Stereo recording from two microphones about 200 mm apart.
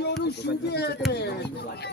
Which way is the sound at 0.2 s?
55° left (ahead or behind).